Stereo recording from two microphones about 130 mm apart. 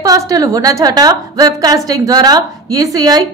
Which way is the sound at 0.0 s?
30° right (ahead or behind).